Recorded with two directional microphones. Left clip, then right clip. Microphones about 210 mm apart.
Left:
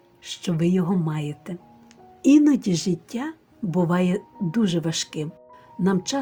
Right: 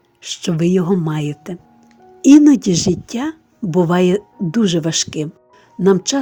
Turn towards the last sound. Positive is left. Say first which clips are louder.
# right 10 dB
turn(degrees=-35)  # may be behind; listen again after turning